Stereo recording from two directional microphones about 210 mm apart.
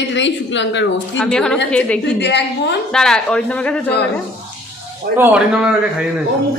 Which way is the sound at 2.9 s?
Centre (ahead or behind).